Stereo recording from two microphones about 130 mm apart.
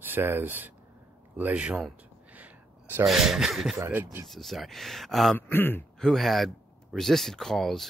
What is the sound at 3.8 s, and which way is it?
Speech, 15° right (ahead or behind).